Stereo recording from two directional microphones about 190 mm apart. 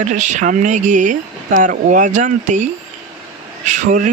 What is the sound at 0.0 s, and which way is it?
Speech, 40° right (ahead or behind).